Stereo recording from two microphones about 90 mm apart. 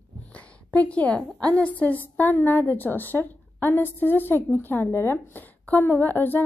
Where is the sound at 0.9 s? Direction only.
10° left (ahead or behind).